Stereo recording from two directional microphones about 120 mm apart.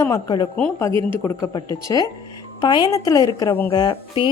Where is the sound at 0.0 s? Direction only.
30° left (ahead or behind).